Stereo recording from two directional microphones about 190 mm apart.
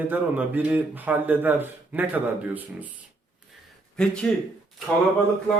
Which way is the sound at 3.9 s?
5° left (ahead or behind).